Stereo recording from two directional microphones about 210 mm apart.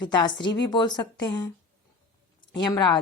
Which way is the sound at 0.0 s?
20° left (ahead or behind).